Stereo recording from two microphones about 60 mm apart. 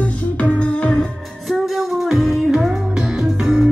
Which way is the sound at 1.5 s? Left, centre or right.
Centre.